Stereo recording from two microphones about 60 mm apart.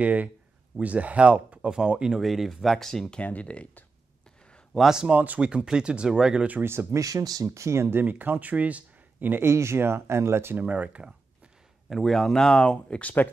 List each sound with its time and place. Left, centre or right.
0.0 s speech: right
2.1 s speech: centre
3.2 s speech: left
4.7 s speech: centre
5.0 s speech: right
5.7 s speech: centre
6.6 s speech: right
7.0 s speech: right
7.5 s speech: right
8.0 s speech: right
9.4 s speech: right
10.6 s speech: right
11.9 s speech: centre
12.4 s speech: centre